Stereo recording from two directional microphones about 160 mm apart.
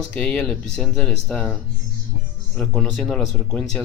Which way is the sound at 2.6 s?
5° left (ahead or behind).